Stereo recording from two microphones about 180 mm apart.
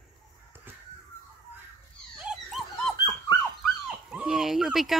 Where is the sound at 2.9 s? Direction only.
25° left (ahead or behind).